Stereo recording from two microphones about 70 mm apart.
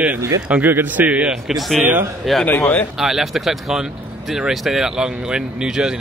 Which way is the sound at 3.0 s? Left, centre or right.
Centre.